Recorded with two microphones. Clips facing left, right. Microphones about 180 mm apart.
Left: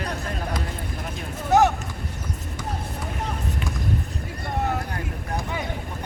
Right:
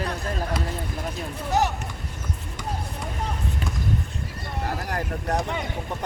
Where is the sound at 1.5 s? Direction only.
50° left (ahead or behind).